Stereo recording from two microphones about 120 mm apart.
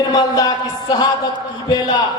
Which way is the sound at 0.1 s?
35° left (ahead or behind).